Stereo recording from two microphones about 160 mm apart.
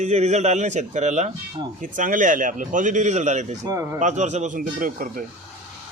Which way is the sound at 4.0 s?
50° right (ahead or behind).